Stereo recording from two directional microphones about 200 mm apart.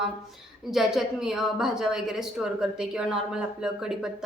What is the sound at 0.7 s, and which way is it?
A woman's voice, centre (ahead or behind).